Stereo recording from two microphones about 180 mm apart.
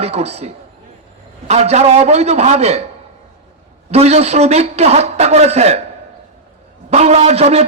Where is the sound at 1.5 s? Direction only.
35° right (ahead or behind).